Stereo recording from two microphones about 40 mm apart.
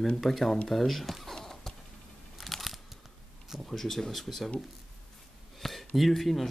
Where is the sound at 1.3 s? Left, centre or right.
Centre.